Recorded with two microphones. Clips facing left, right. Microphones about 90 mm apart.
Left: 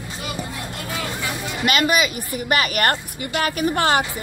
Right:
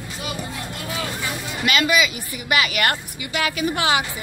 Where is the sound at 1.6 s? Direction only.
40° left (ahead or behind).